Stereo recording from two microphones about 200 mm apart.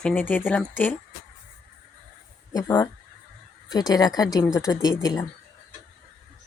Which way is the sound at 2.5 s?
20° left (ahead or behind).